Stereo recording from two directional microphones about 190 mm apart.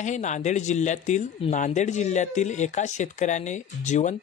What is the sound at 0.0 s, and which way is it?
A man's voice, 40° left (ahead or behind).